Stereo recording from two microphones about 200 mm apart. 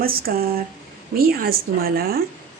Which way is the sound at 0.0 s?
50° right (ahead or behind).